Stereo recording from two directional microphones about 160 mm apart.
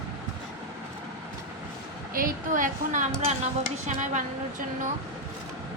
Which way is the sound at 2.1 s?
60° right (ahead or behind).